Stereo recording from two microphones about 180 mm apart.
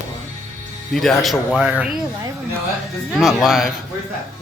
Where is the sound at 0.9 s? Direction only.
Centre (ahead or behind).